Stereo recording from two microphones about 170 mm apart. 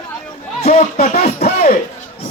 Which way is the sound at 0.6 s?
40° left (ahead or behind).